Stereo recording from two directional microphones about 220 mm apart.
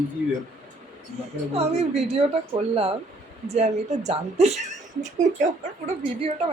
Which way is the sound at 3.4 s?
30° right (ahead or behind).